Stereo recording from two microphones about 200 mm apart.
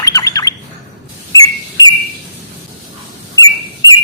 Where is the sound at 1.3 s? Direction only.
20° left (ahead or behind).